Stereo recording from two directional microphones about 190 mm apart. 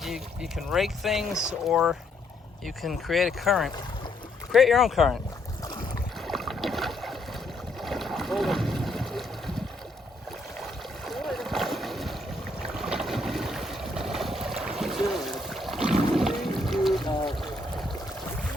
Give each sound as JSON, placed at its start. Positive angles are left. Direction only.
{"t": 0.0, "sound": "speech", "side_deg": 0}
{"t": 6.2, "sound": "boat", "side_deg": 0}
{"t": 10.6, "sound": "boat", "side_deg": 0}
{"t": 17.1, "sound": "trickle", "side_deg": 25}